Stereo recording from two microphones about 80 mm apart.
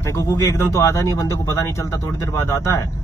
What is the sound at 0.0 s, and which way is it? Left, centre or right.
Speech, left.